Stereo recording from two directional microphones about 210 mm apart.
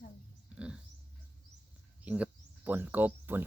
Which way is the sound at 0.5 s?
5° right (ahead or behind).